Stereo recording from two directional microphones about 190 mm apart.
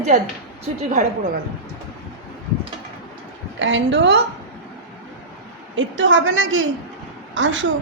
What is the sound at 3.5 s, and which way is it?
Speech, 70° right (ahead or behind).